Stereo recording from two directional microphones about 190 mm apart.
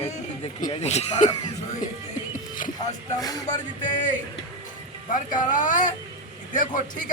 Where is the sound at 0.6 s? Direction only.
30° left (ahead or behind).